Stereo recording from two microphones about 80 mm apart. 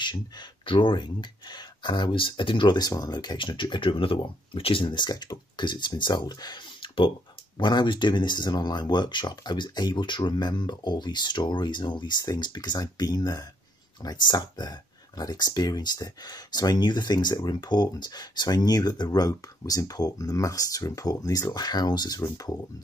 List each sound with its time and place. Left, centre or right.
0.0 s speech: left
2.9 s speech: left
4.7 s speech: left
7.5 s speech: left